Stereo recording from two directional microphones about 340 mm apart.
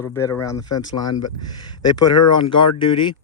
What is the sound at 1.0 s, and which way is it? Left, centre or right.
Speech, left.